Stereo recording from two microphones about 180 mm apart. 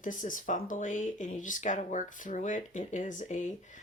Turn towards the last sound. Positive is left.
turn(degrees=45)  # may be behind; listen again after turning